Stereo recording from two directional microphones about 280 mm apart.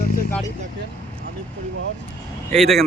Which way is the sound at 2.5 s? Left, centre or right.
Centre.